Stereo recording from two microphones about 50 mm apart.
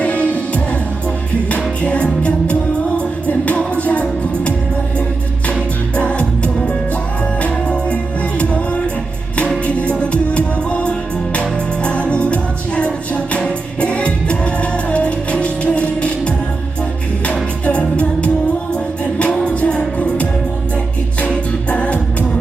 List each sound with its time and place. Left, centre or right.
0.0 s music: left
6.0 s music: left
17.7 s music: left
19.5 s music: left
21.7 s music: left